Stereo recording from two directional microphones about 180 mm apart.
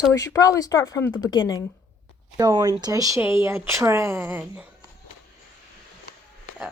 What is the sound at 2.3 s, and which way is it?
Speech, 20° right (ahead or behind).